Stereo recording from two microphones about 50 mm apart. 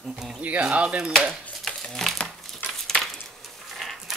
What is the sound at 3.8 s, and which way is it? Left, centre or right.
Dog, centre.